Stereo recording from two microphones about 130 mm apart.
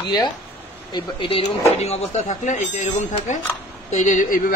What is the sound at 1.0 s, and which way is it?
A man's voice, 40° left (ahead or behind).